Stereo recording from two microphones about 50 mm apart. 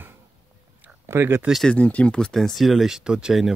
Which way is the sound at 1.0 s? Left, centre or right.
Right.